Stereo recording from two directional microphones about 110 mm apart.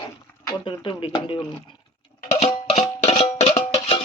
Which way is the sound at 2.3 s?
80° left.